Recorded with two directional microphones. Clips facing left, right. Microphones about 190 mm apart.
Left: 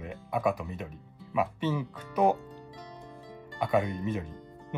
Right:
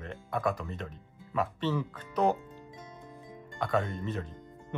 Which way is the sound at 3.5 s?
15° left (ahead or behind).